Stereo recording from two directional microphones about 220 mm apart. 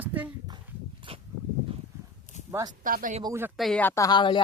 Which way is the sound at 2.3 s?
35° left (ahead or behind).